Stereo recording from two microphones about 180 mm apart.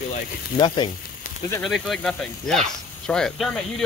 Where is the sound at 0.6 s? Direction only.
25° left (ahead or behind).